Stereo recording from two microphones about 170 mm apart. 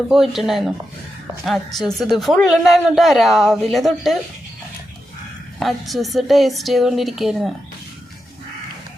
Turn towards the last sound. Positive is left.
turn(degrees=0)  # may be behind; listen again after turning